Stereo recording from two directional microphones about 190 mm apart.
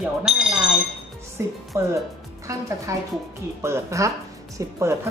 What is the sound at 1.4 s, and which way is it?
Speech, 15° right (ahead or behind).